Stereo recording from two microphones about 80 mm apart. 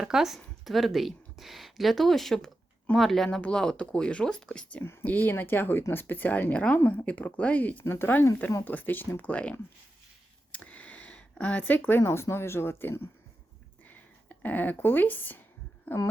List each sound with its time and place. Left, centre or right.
0.0 s speech: centre
4.8 s speech: left
10.5 s a sound: centre
12.0 s speech: left